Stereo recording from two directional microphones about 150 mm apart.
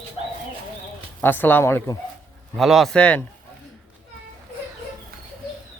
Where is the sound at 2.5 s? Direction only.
Centre (ahead or behind).